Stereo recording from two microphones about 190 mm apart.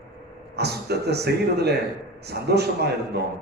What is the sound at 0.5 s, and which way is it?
A man's voice, 60° right (ahead or behind).